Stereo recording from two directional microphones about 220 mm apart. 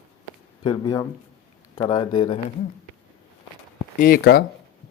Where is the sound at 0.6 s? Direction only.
15° left (ahead or behind).